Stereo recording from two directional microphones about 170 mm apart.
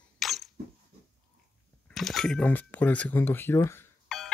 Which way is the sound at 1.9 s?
Centre (ahead or behind).